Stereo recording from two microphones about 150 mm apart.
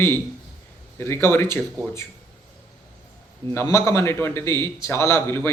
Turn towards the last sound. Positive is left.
turn(degrees=15)  # may be behind; listen again after turning